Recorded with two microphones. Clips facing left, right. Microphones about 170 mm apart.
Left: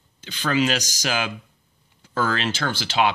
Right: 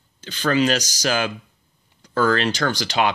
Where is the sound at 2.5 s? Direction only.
40° right (ahead or behind).